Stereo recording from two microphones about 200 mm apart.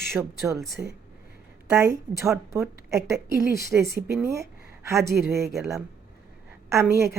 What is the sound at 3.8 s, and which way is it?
Speech, 55° right (ahead or behind).